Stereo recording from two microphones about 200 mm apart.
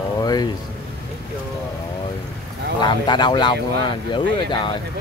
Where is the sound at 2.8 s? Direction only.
20° left (ahead or behind).